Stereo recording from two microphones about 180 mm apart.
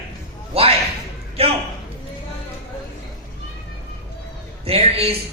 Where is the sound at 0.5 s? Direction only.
35° right (ahead or behind).